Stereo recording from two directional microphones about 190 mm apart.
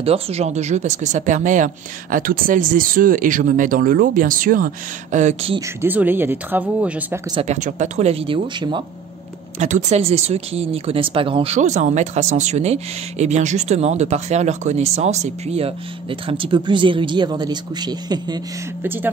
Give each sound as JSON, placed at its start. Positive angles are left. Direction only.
{"t": 0.0, "sound": "speech", "side_deg": -30}
{"t": 5.8, "sound": "speech", "side_deg": -10}
{"t": 7.4, "sound": "speech", "side_deg": -40}
{"t": 9.6, "sound": "speech", "side_deg": -35}
{"t": 18.8, "sound": "speech", "side_deg": -10}